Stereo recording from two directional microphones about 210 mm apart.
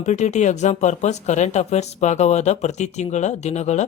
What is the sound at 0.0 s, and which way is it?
Speech, 35° left (ahead or behind).